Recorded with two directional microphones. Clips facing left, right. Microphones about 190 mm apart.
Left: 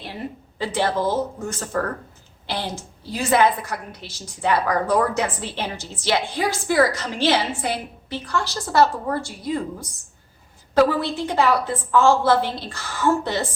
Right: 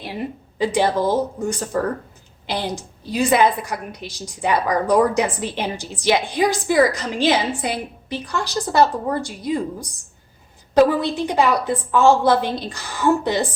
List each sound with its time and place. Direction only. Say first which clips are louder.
0.6 s a woman's voice: right 4 dB; 15° right (ahead or behind)
10.8 s a woman's voice: right 3 dB; 15° right (ahead or behind)